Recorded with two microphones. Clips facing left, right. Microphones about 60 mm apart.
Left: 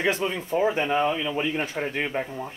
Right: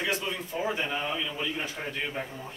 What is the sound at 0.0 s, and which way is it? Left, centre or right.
Speech, left.